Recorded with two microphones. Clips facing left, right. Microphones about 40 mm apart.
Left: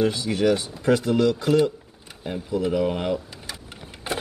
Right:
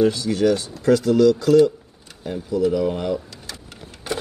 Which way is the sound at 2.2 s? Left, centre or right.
Left.